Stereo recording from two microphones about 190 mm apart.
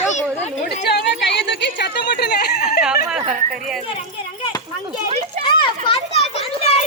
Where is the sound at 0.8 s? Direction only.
60° left (ahead or behind).